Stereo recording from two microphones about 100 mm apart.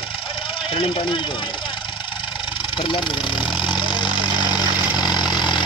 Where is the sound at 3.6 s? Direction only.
55° left (ahead or behind).